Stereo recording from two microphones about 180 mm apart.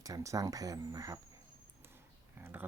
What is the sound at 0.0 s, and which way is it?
Speech, 20° right (ahead or behind).